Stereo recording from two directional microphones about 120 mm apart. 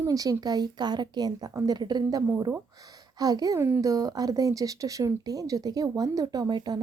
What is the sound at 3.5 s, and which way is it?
Speech, 20° right (ahead or behind).